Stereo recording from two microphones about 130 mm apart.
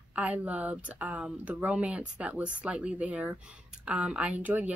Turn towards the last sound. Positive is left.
turn(degrees=-10)  # may be behind; listen again after turning